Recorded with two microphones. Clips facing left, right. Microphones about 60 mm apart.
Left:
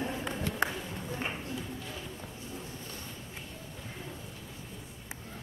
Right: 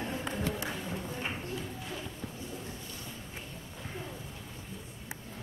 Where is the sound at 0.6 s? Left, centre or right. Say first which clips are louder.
Left 6 dB; left.